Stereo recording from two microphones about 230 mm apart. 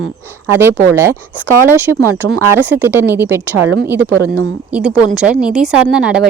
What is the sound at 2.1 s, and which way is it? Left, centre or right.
Speech, right.